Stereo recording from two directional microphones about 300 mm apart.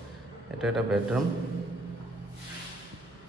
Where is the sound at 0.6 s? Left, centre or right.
Centre.